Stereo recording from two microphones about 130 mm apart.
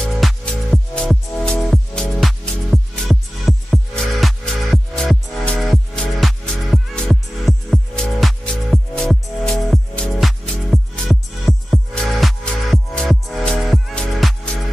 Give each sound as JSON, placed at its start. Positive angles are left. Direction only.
{"t": 0.0, "sound": "music", "side_deg": 5}